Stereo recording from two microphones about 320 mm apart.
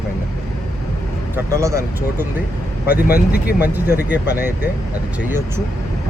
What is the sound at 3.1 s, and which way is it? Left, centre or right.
Speech, left.